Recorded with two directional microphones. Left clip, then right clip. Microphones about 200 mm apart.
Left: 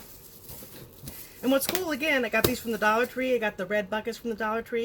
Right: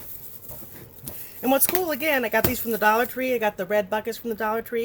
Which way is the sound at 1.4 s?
30° right (ahead or behind).